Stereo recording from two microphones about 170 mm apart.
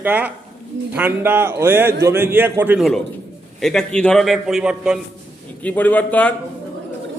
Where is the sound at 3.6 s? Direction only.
5° left (ahead or behind).